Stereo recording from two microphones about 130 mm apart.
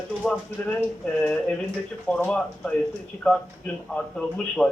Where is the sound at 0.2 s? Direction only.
5° left (ahead or behind).